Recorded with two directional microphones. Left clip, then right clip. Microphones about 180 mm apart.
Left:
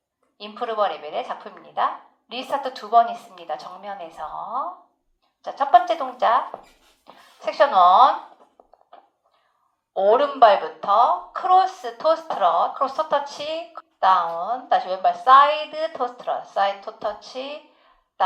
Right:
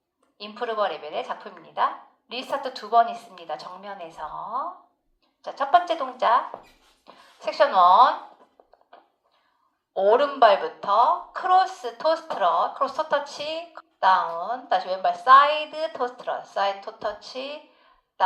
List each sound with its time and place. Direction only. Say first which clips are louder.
0.3 s a woman's voice: left 3 dB; 30° right (ahead or behind)
8.6 s a sound: left 2 dB; 30° right (ahead or behind)
9.9 s a woman's voice: left 2 dB; 30° right (ahead or behind)